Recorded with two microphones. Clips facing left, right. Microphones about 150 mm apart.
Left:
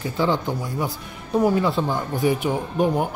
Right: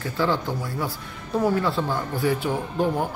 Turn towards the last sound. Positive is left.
turn(degrees=20)  # may be behind; listen again after turning